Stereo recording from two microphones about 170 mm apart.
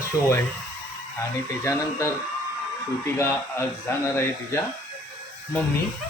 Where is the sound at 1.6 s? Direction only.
15° left (ahead or behind).